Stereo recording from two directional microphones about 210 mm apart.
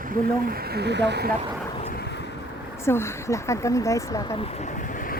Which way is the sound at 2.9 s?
10° left (ahead or behind).